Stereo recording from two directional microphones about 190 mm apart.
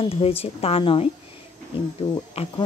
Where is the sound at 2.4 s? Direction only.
30° left (ahead or behind).